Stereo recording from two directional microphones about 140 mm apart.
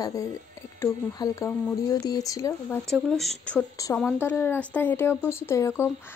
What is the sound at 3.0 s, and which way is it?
Speech, centre (ahead or behind).